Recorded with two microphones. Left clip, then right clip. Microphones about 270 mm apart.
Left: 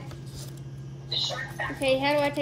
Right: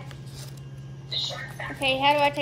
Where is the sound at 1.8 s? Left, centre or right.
Centre.